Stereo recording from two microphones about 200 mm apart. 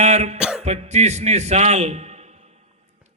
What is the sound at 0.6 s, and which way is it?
A man's voice, 35° right (ahead or behind).